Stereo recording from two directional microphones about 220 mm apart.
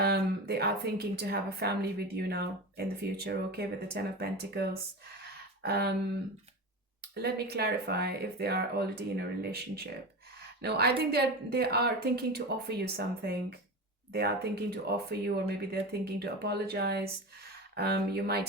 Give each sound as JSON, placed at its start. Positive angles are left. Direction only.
{"t": 0.0, "sound": "a woman's voice", "side_deg": -45}
{"t": 7.0, "sound": "a woman's voice", "side_deg": -45}